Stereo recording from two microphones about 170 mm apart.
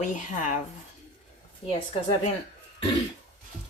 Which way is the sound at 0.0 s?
50° left (ahead or behind).